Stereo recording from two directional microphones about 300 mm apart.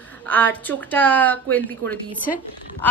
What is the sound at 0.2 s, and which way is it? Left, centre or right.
Speech, centre.